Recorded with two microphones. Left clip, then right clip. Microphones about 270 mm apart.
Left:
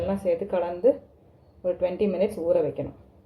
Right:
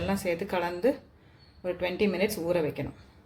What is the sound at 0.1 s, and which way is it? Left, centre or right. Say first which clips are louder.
Speech: left 3 dB; right.